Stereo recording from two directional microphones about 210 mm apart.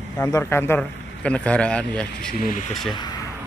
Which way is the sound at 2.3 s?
40° left (ahead or behind).